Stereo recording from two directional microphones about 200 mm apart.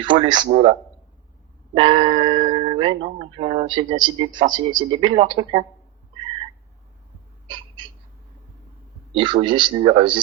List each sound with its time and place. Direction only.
0.0 s speech: 25° right (ahead or behind)
0.4 s a man's voice: 35° right (ahead or behind)
9.1 s speech: 25° right (ahead or behind)